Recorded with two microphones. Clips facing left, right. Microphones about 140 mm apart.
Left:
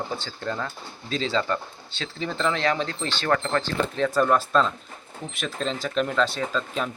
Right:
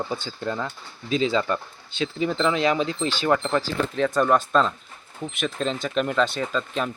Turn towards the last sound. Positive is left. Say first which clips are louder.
# right 1 dB
turn(degrees=0)  # may be behind; listen again after turning